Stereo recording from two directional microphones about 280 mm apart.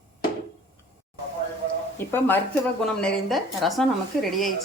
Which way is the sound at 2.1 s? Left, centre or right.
Centre.